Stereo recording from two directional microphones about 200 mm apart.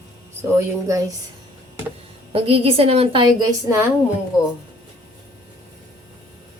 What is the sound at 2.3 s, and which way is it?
A woman's voice, 30° right (ahead or behind).